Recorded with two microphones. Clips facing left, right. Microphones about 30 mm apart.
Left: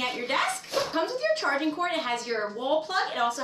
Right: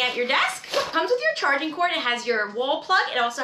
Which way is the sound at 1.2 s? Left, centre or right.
Right.